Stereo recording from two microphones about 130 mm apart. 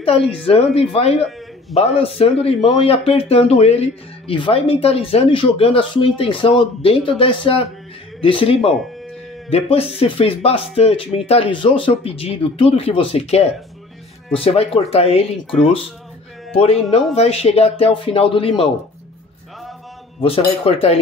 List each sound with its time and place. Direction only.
0.0 s speech: 45° left (ahead or behind)
16.9 s speech: 50° left (ahead or behind)
20.2 s speech: 45° left (ahead or behind)